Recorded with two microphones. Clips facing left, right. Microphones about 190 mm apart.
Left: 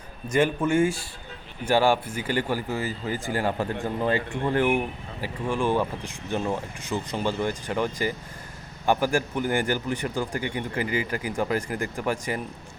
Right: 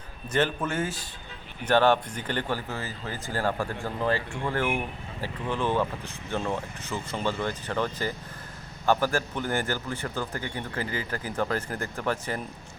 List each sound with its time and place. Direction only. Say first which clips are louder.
0.3 s speech: left 4 dB; 10° left (ahead or behind)